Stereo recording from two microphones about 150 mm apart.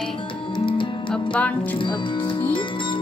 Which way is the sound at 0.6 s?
35° left (ahead or behind).